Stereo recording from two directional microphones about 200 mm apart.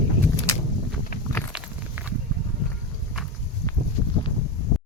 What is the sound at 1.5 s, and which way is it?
Walk, 5° right (ahead or behind).